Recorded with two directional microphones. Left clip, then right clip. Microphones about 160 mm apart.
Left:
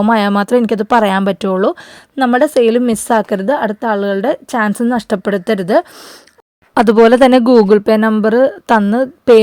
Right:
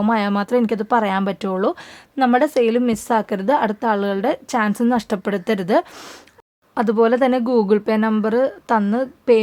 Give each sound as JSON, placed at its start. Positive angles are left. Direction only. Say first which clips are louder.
{"t": 0.0, "sound": "speech", "louder": "left 7 dB", "side_deg": 40}
{"t": 6.7, "sound": "speech", "louder": "left 9 dB", "side_deg": 65}